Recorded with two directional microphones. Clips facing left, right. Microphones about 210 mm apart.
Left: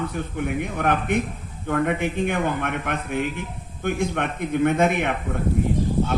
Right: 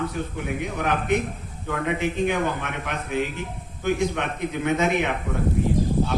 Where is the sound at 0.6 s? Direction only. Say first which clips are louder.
Left 1 dB; 55° left (ahead or behind).